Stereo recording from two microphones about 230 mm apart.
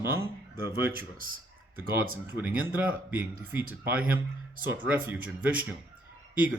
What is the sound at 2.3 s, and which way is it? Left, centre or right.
Speech, centre.